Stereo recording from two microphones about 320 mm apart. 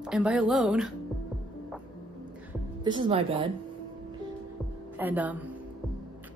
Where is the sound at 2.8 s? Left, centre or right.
Centre.